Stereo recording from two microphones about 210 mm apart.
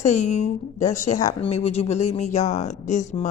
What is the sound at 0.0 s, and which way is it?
Speech, 35° left (ahead or behind).